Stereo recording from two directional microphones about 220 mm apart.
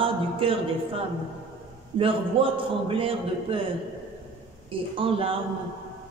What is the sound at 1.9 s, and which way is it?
A woman's voice, 25° right (ahead or behind).